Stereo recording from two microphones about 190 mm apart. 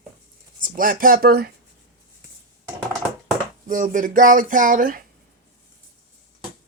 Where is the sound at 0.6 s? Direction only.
45° right (ahead or behind).